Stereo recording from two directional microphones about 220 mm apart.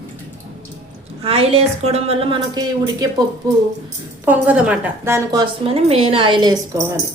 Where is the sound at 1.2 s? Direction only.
25° right (ahead or behind).